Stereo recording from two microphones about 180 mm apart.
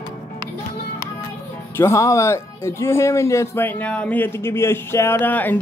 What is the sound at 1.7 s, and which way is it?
Speech, 15° left (ahead or behind).